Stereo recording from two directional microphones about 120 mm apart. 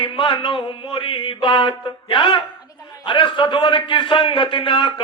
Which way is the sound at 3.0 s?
45° left (ahead or behind).